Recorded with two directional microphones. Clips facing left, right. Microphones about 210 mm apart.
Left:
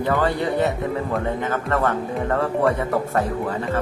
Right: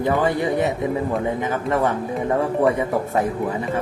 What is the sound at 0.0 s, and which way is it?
Speech, 15° right (ahead or behind).